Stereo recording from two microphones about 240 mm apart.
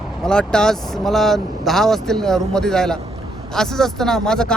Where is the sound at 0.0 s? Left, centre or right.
Centre.